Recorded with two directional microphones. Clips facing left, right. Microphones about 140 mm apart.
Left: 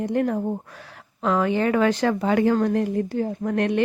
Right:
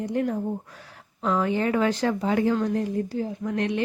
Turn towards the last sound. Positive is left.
turn(degrees=55)  # may be behind; listen again after turning